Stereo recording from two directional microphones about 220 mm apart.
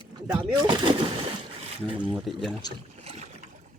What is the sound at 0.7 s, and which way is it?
Speech, 20° right (ahead or behind).